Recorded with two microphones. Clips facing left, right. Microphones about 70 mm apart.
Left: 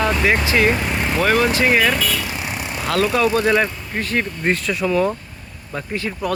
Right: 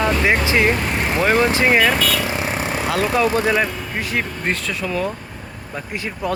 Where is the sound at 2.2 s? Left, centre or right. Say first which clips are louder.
Right 4 dB; right.